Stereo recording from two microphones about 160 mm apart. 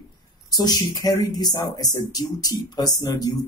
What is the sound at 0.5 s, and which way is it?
Speech, 25° left (ahead or behind).